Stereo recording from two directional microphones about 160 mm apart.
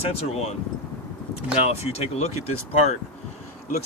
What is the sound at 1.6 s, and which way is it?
Speech, 40° left (ahead or behind).